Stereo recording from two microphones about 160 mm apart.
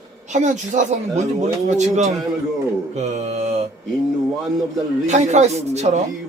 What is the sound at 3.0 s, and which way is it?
Mantra, 45° right (ahead or behind).